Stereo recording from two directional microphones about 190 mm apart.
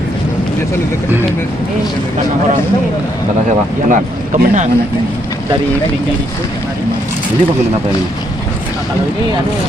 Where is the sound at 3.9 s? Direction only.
40° right (ahead or behind).